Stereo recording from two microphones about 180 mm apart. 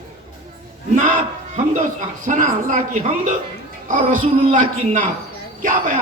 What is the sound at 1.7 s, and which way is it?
Speech, 45° right (ahead or behind).